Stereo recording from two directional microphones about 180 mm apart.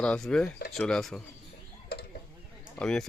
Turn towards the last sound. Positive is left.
turn(degrees=5)  # may be behind; listen again after turning